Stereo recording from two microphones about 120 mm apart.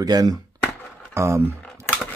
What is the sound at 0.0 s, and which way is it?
Speech, 30° right (ahead or behind).